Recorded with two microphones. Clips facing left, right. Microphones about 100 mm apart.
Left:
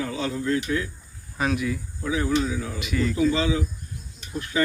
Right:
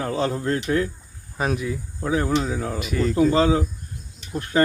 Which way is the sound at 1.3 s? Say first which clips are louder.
Even; 35° right (ahead or behind).